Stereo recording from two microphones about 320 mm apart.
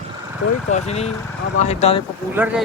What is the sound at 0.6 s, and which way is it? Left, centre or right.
Speech, left.